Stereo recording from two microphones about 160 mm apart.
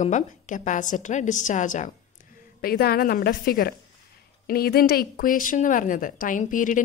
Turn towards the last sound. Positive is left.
turn(degrees=55)  # may be behind; listen again after turning